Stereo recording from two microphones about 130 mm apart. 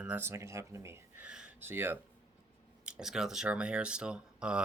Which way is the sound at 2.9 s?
5° right (ahead or behind).